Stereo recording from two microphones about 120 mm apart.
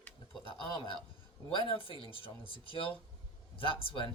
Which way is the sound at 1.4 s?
50° left (ahead or behind).